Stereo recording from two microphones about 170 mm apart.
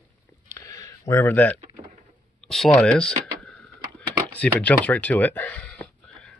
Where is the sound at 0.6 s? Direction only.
20° left (ahead or behind).